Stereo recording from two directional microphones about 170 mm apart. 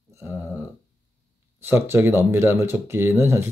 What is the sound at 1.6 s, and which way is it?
Speech, 15° right (ahead or behind).